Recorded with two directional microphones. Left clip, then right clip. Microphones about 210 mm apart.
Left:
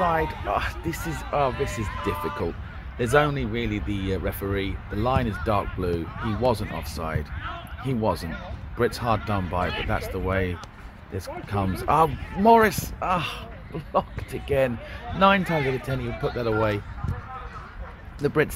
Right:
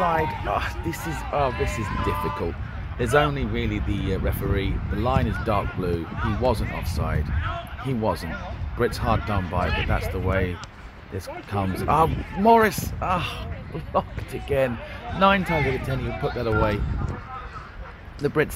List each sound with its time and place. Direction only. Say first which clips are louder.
0.0 s speech: right 1 dB; centre (ahead or behind)
15.5 s speech: right 1 dB; 30° left (ahead or behind)
16.3 s speech: even; centre (ahead or behind)
18.2 s speech: even; centre (ahead or behind)